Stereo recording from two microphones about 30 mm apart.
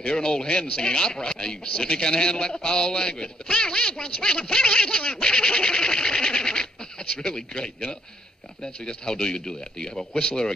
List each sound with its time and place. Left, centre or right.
0.1 s a man's voice: left